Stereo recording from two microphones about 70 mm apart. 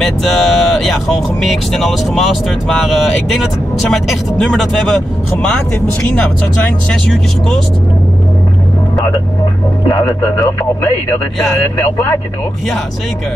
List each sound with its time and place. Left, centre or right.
0.0 s speech: centre
6.9 s speech: centre
9.8 s speech: left